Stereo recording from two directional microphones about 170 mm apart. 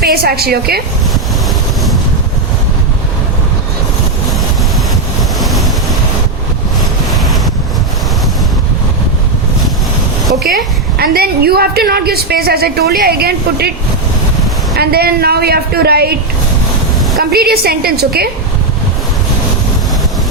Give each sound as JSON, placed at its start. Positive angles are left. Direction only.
{"t": 0.0, "sound": "a woman's voice", "side_deg": -65}
{"t": 5.4, "sound": "waves", "side_deg": 0}
{"t": 10.4, "sound": "a woman's voice", "side_deg": -65}
{"t": 14.8, "sound": "a woman's voice", "side_deg": -65}
{"t": 17.2, "sound": "a woman's voice", "side_deg": -65}